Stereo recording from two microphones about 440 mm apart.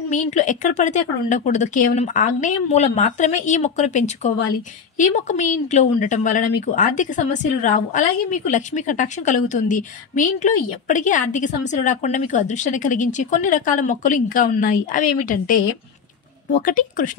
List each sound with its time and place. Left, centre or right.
0.1 s speech: centre